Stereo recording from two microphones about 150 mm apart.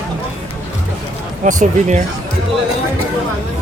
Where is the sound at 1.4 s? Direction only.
60° right (ahead or behind).